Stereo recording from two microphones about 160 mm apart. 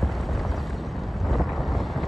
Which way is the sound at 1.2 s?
Centre (ahead or behind).